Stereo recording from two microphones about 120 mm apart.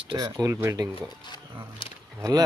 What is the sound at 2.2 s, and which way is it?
Speech, 30° right (ahead or behind).